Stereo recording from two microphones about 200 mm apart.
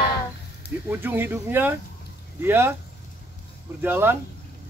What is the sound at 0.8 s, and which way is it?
Speech, 10° right (ahead or behind).